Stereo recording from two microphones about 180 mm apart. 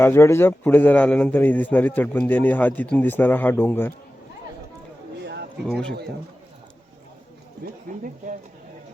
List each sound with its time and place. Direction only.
0.0 s a man's voice: 15° left (ahead or behind)
5.2 s a sound: 70° right (ahead or behind)
5.6 s speech: 5° left (ahead or behind)
7.6 s speech: 50° right (ahead or behind)